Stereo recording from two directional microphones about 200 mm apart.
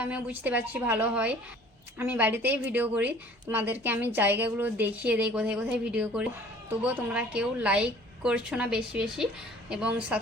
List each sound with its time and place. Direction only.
0.0 s a woman's voice: 10° right (ahead or behind)